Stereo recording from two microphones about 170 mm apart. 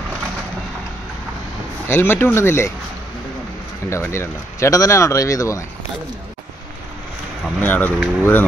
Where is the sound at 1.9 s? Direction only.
10° left (ahead or behind).